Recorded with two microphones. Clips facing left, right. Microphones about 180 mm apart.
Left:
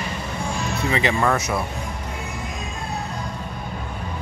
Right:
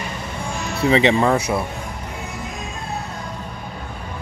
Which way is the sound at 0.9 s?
25° right (ahead or behind).